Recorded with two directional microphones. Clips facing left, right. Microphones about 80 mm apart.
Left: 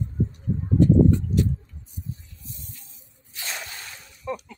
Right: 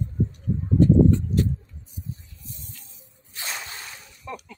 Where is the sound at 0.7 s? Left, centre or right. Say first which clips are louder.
Even; right.